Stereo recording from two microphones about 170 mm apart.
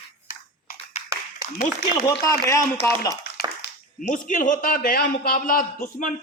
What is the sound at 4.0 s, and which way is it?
A man's voice, 50° left (ahead or behind).